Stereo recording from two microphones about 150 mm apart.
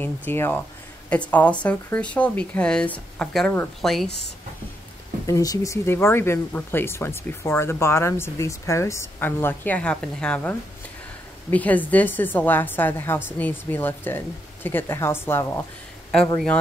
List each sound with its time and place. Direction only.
0.0 s speech: 15° left (ahead or behind)
5.2 s speech: 25° left (ahead or behind); by 10.5 s 5° left (ahead or behind)
11.5 s speech: 10° left (ahead or behind)